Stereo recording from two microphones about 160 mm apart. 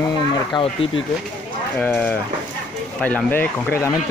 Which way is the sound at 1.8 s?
10° left (ahead or behind).